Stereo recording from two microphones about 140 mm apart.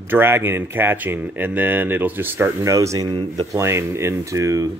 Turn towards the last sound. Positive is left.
turn(degrees=-25)  # may be behind; listen again after turning